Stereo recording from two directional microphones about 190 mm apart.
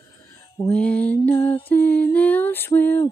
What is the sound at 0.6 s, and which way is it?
Music, 5° left (ahead or behind).